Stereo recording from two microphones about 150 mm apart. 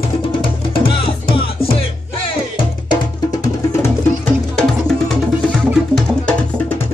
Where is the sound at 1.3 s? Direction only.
40° left (ahead or behind).